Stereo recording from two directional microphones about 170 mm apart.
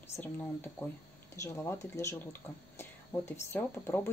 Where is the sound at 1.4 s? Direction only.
15° left (ahead or behind).